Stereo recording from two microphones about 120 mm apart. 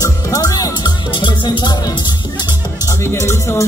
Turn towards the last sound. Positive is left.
turn(degrees=25)  # may be behind; listen again after turning